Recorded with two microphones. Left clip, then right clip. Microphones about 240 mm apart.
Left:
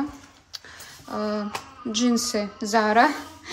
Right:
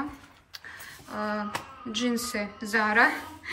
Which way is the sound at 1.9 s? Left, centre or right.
Centre.